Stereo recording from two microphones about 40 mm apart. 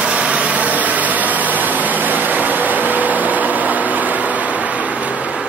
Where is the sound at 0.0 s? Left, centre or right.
Right.